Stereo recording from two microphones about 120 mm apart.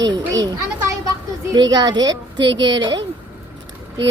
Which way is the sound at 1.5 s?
35° right (ahead or behind).